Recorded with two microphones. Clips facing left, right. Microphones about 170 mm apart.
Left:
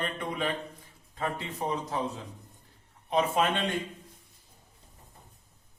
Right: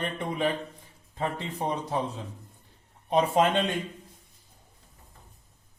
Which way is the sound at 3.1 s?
35° right (ahead or behind).